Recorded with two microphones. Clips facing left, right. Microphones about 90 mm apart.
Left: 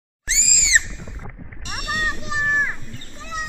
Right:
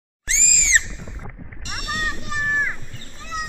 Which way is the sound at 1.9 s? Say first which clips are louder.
Left 2 dB; 20° left (ahead or behind).